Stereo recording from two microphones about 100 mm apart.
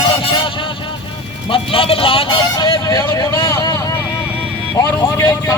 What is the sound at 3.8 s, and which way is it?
Vehicle, 30° left (ahead or behind).